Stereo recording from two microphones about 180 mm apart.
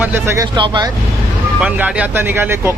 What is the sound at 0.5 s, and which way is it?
Speech, 25° right (ahead or behind).